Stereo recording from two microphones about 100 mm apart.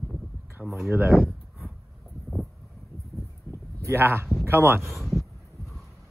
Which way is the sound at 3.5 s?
30° right (ahead or behind).